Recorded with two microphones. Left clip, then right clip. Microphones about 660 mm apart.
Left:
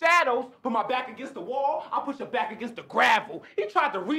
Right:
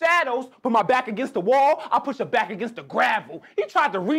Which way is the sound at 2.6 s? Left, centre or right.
Right.